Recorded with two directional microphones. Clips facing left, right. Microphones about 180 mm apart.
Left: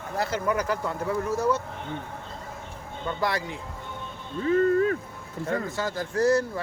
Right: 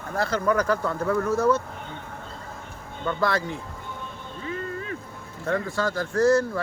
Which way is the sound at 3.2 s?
15° left (ahead or behind).